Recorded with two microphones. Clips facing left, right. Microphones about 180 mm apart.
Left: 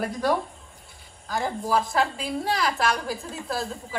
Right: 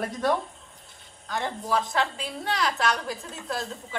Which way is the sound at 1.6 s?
40° left (ahead or behind).